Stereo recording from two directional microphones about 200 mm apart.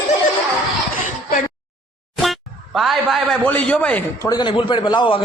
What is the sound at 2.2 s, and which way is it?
Speech, centre (ahead or behind).